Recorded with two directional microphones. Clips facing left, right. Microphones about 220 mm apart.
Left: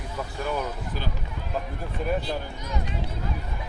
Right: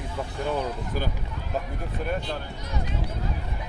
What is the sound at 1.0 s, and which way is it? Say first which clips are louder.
Speech: right 5 dB; 45° right (ahead or behind).